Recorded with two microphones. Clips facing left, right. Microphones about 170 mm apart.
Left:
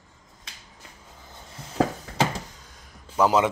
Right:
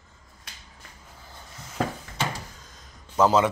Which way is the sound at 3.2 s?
15° left (ahead or behind).